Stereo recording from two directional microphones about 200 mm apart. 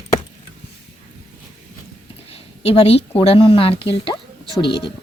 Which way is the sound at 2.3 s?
30° left (ahead or behind).